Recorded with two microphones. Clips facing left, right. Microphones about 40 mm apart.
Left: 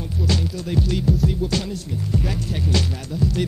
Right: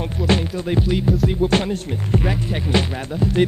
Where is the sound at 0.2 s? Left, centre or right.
Right.